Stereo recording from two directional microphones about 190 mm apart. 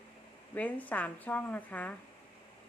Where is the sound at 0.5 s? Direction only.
10° left (ahead or behind).